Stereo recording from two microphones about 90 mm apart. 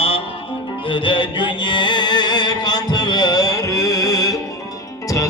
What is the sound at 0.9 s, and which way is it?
Music, 70° left (ahead or behind).